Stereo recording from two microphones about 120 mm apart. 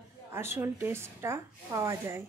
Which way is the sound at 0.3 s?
20° right (ahead or behind).